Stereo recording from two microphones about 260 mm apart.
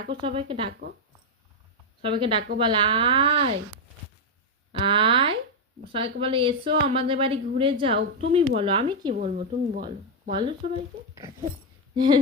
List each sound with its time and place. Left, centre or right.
0.1 s a woman's voice: centre
2.0 s a woman's voice: centre
4.7 s a woman's voice: centre
9.1 s a woman's voice: right
11.9 s speech: centre